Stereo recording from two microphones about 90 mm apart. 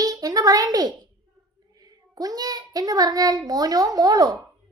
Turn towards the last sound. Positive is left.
turn(degrees=-45)  # may be behind; listen again after turning